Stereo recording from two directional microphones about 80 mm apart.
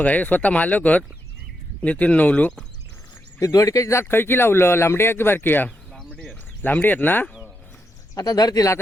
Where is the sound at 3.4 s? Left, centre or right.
Left.